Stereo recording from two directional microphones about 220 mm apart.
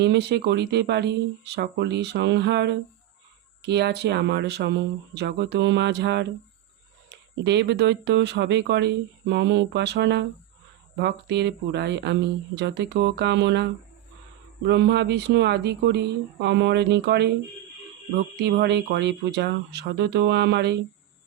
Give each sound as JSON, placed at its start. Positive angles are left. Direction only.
{"t": 0.0, "sound": "speech", "side_deg": -50}
{"t": 14.7, "sound": "speech", "side_deg": -50}
{"t": 18.3, "sound": "speech", "side_deg": -50}